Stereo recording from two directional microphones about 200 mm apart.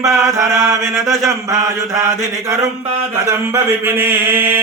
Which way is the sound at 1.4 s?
15° right (ahead or behind).